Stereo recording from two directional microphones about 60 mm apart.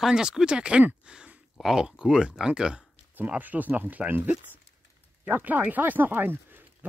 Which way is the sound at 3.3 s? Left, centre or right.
Right.